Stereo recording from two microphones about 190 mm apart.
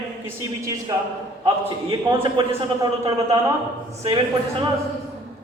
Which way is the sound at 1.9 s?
30° right (ahead or behind).